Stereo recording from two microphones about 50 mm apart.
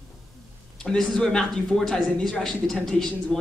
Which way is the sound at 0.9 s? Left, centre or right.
Centre.